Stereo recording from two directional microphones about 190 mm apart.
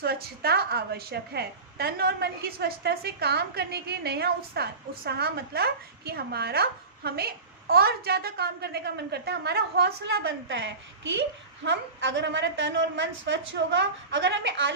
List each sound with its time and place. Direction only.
0.0 s a woman's voice: 55° right (ahead or behind); by 14.7 s 75° right (ahead or behind)